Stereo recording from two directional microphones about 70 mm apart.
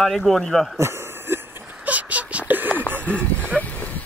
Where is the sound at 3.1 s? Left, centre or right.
Centre.